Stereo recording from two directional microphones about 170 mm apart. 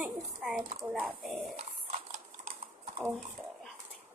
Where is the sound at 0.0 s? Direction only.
5° right (ahead or behind).